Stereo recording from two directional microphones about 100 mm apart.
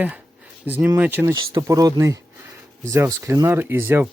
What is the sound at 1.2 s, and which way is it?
Speech, 30° right (ahead or behind).